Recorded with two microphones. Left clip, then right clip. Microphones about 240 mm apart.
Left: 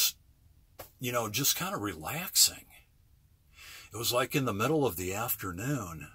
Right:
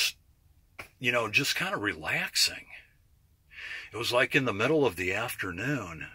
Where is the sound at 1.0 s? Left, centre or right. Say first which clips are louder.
Right 6 dB; left.